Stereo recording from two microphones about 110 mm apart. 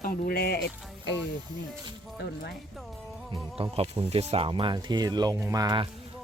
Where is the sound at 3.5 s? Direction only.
60° right (ahead or behind).